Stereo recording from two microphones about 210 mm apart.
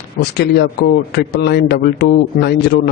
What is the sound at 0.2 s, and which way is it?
A man's voice, 50° left (ahead or behind).